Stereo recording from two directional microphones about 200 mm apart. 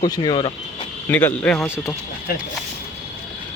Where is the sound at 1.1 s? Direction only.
10° left (ahead or behind).